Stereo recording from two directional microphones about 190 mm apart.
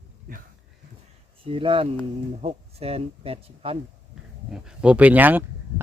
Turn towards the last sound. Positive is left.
turn(degrees=-10)  # may be behind; listen again after turning